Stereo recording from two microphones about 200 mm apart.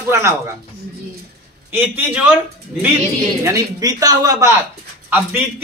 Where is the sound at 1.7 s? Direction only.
10° right (ahead or behind).